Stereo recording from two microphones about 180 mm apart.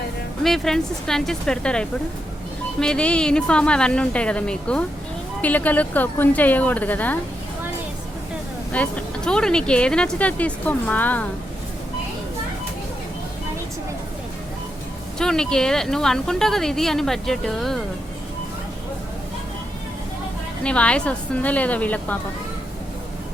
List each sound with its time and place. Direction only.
0.4 s speech: centre (ahead or behind)
8.7 s speech: 5° left (ahead or behind)
15.2 s speech: 5° left (ahead or behind)
20.7 s speech: 5° left (ahead or behind)